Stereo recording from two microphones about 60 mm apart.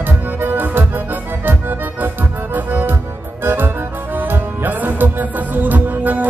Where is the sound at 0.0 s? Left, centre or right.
Right.